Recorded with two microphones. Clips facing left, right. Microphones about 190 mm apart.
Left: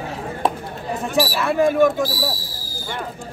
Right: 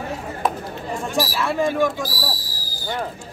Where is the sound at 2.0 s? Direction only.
25° left (ahead or behind).